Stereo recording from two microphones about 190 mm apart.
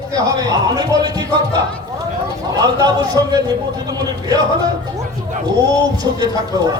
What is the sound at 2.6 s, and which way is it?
Speech, 20° right (ahead or behind).